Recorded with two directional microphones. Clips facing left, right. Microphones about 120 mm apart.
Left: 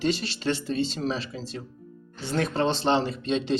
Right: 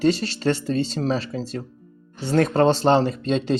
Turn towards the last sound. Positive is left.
turn(degrees=-45)  # may be behind; listen again after turning